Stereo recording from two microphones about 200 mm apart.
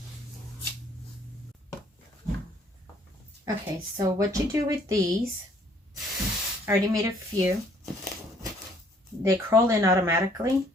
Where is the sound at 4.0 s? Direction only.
15° right (ahead or behind).